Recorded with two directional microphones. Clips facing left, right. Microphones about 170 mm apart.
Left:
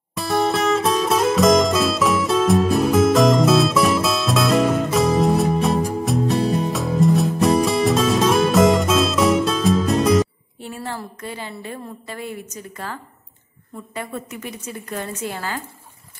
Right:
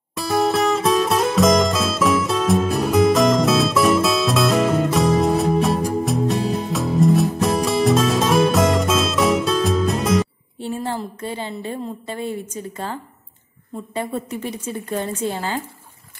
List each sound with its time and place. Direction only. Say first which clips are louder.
0.1 s music: right 1 dB; centre (ahead or behind)
10.6 s a woman's voice: right 5 dB; 30° right (ahead or behind)